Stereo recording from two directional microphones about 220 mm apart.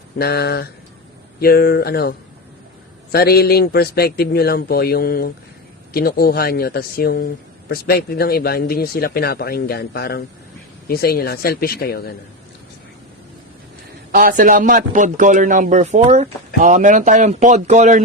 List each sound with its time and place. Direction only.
0.2 s speech: 45° left (ahead or behind)
14.1 s a man's voice: 40° right (ahead or behind)